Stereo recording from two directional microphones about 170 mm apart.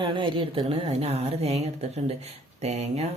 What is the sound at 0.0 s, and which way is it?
Speech, 30° right (ahead or behind).